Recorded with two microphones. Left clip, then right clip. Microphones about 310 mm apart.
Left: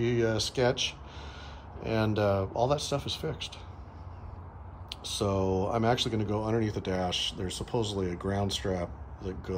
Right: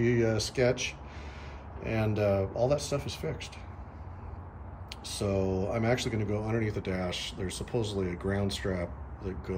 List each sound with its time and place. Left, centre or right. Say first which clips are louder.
0.0 s speech: even; centre
4.8 s a sound: left 4 dB; centre
5.3 s speech: left 1 dB; centre
8.2 s speech: even; centre
8.7 s speech: left 1 dB; centre